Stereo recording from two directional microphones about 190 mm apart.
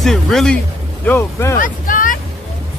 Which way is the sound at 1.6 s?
45° left (ahead or behind).